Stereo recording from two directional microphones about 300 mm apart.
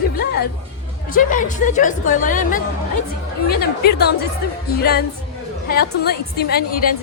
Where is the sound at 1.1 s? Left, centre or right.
Left.